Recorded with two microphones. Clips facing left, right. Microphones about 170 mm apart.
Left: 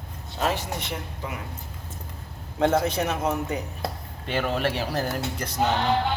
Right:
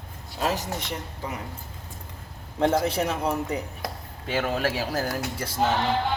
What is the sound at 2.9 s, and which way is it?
Speech, 30° right (ahead or behind).